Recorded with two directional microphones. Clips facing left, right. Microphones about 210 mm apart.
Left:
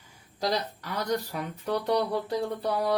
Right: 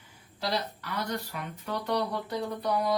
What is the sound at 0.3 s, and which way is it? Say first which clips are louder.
Speech: left 3 dB; 40° left (ahead or behind).